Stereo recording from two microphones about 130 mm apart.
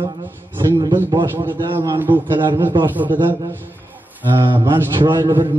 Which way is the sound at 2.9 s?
15° right (ahead or behind).